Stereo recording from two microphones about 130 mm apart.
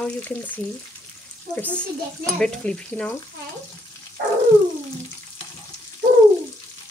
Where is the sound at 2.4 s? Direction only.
5° left (ahead or behind).